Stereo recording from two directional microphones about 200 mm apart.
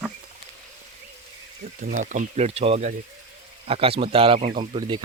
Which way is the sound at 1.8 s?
40° right (ahead or behind).